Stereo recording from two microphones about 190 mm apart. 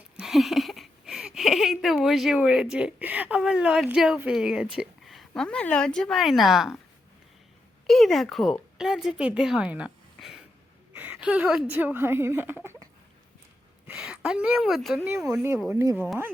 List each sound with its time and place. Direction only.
0.2 s speech: centre (ahead or behind)
7.9 s a woman's voice: centre (ahead or behind)
13.8 s speech: 5° right (ahead or behind)